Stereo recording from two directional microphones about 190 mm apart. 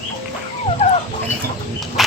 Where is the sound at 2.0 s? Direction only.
Centre (ahead or behind).